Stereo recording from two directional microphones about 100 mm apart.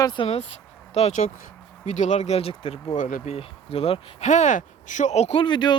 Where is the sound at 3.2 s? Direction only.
85° left.